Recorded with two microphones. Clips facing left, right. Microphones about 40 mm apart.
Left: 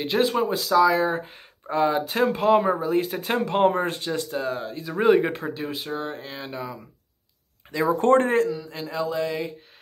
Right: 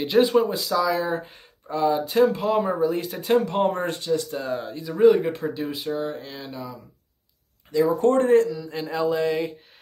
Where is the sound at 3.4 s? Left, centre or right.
Left.